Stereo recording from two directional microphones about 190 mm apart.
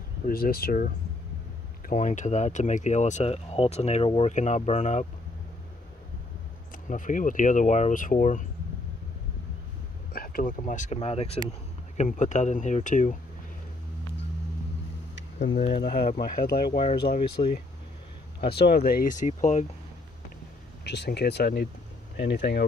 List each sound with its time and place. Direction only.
0.3 s speech: 50° left (ahead or behind)
6.9 s speech: 45° left (ahead or behind)
10.1 s speech: 50° left (ahead or behind)
15.7 s speech: 50° left (ahead or behind)
16.7 s speech: 35° left (ahead or behind)
18.4 s speech: 55° left (ahead or behind); by 19.6 s 40° left (ahead or behind)
20.8 s speech: 60° left (ahead or behind)